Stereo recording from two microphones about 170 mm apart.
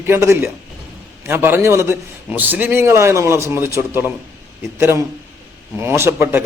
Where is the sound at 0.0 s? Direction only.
15° right (ahead or behind).